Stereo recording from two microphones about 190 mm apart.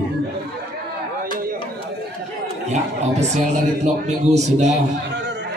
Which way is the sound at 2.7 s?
35° right (ahead or behind).